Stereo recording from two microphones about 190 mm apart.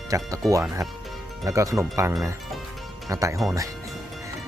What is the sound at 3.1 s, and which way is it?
Speech, 15° right (ahead or behind).